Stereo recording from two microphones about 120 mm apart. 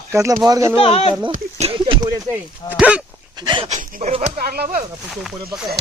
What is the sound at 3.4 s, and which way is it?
Speech, 40° right (ahead or behind).